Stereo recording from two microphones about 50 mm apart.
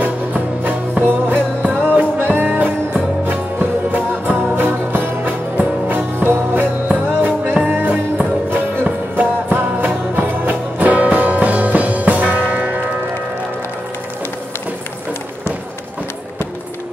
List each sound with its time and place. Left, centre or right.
0.0 s music: right
6.1 s music: right
6.5 s music: right
10.5 s music: right